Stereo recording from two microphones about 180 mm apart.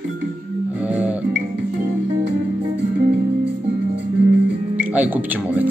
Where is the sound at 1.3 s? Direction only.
70° right (ahead or behind).